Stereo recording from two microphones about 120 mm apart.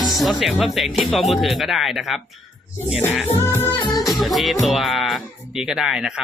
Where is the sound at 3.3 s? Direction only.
20° left (ahead or behind).